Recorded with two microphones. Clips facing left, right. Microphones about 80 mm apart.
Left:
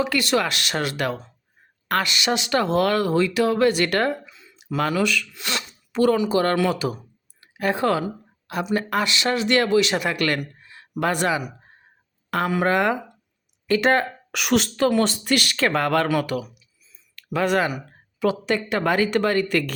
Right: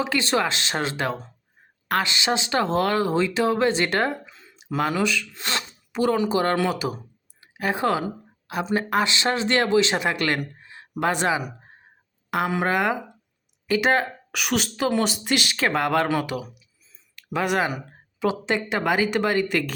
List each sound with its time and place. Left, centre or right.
0.0 s speech: right
5.9 s speech: centre
10.4 s a sound: right
11.0 s speech: right; by 14.7 s centre
14.8 s speech: centre